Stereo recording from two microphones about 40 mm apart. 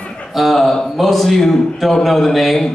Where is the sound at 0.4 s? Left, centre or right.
Centre.